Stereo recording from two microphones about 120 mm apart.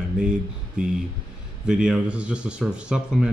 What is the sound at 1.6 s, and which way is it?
Speech, 5° right (ahead or behind).